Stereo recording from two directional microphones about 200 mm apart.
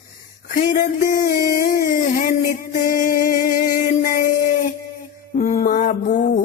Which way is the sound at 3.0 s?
45° left (ahead or behind).